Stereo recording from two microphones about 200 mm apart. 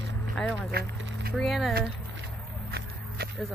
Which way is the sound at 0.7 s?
50° right (ahead or behind).